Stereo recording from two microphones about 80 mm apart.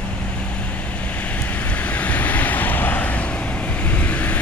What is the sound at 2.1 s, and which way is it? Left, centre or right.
Vehicle, centre.